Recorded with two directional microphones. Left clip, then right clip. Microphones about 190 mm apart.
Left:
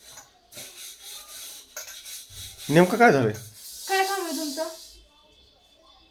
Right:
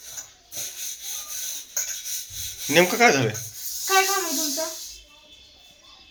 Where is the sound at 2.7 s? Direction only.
40° left (ahead or behind).